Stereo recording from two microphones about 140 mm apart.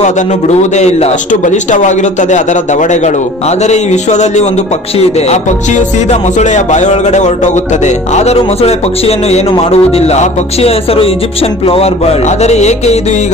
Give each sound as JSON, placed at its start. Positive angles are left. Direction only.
{"t": 0.0, "sound": "a man's voice", "side_deg": 55}